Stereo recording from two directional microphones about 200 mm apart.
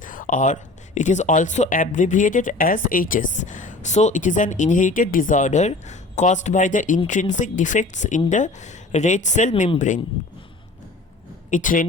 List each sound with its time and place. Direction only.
0.0 s speech: 40° left (ahead or behind)
11.5 s speech: 40° left (ahead or behind)